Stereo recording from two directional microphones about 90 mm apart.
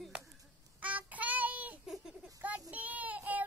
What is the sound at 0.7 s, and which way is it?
Child singing, 15° right (ahead or behind).